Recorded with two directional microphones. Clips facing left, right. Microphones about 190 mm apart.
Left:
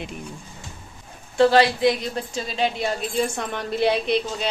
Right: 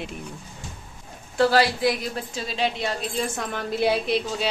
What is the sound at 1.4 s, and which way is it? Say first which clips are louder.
A woman's voice: left 3 dB; centre (ahead or behind).